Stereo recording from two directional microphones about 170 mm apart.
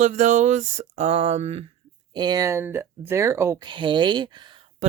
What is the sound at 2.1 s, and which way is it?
Speech, 25° right (ahead or behind).